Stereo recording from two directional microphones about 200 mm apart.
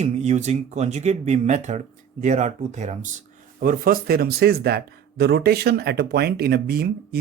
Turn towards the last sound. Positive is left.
turn(degrees=-50)  # may be behind; listen again after turning